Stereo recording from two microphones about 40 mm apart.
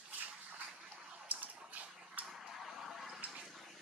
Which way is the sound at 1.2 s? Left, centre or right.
Right.